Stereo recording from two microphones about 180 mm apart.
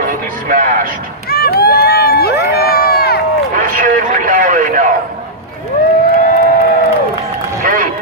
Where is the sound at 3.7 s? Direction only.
45° right (ahead or behind).